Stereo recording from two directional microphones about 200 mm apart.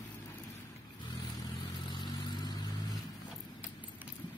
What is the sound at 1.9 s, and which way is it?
Vehicle, 20° left (ahead or behind).